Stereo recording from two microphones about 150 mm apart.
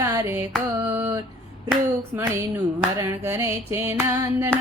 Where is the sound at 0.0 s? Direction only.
20° right (ahead or behind).